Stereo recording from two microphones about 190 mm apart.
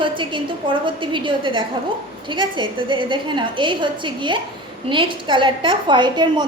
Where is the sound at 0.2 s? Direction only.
25° right (ahead or behind).